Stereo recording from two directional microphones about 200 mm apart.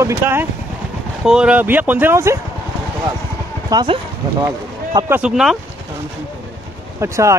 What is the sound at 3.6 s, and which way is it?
Speech, 20° right (ahead or behind).